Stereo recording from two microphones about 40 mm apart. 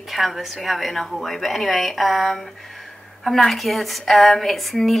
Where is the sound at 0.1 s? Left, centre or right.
Centre.